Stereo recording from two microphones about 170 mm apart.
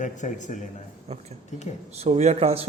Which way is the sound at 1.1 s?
40° right (ahead or behind).